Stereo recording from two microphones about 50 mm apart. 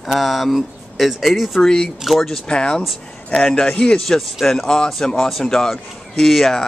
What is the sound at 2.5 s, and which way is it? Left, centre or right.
Speech, centre.